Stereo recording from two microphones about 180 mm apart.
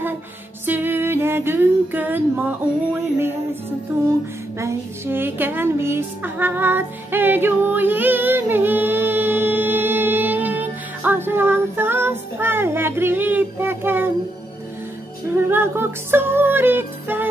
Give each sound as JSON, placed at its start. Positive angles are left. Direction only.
{"t": 0.7, "sound": "female singing", "side_deg": -10}
{"t": 4.6, "sound": "music", "side_deg": -15}
{"t": 15.3, "sound": "music", "side_deg": -10}